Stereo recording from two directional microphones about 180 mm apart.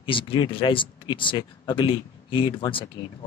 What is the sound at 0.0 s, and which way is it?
Speech, 30° left (ahead or behind).